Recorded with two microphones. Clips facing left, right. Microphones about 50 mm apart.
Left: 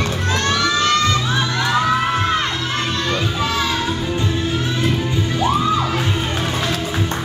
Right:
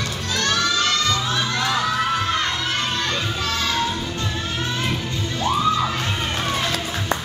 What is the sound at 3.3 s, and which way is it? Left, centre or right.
Children playing, centre.